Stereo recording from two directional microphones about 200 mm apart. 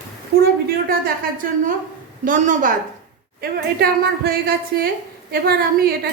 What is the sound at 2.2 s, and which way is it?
A woman's voice, 40° right (ahead or behind).